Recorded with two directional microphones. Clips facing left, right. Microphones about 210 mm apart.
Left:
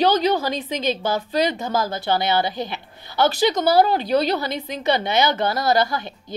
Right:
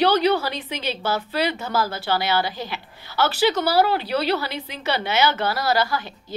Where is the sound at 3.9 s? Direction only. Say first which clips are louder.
Left 4 dB; 45° left (ahead or behind).